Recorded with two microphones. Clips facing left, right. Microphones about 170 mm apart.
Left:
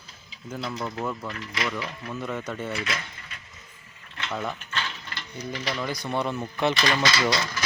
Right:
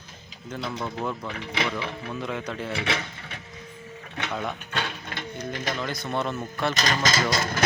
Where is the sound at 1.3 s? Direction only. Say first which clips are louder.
Right 2 dB; 70° right (ahead or behind).